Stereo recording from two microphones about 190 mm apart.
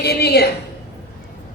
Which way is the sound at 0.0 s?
60° left (ahead or behind).